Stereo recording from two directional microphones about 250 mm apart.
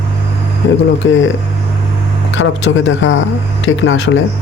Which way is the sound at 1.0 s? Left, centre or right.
Left.